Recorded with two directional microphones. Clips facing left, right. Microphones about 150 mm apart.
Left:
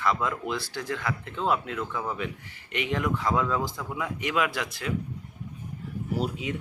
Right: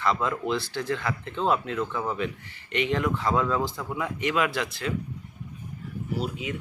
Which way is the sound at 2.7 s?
10° left (ahead or behind).